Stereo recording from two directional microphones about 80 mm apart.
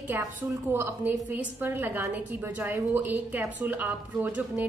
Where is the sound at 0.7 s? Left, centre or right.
Right.